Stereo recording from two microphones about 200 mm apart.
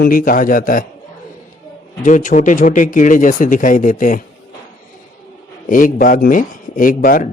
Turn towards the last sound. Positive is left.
turn(degrees=45)  # may be behind; listen again after turning